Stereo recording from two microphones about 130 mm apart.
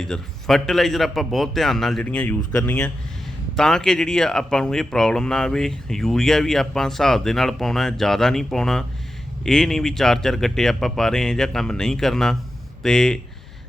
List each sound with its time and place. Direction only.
0.0 s speech: 5° left (ahead or behind)